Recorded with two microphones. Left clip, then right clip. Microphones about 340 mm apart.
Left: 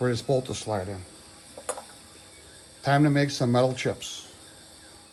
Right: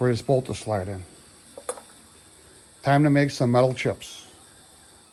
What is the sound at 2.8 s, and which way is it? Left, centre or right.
Speech, centre.